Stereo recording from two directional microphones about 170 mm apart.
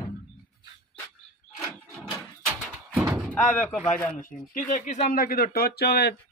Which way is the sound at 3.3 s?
10° left (ahead or behind).